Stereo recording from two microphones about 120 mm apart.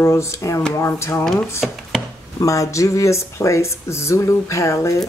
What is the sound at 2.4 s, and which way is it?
Speech, 25° left (ahead or behind).